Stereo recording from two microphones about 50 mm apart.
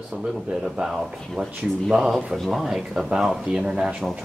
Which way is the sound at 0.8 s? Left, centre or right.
Right.